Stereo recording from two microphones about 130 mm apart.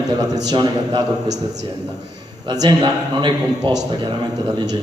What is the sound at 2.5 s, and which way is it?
A man's voice, 30° right (ahead or behind).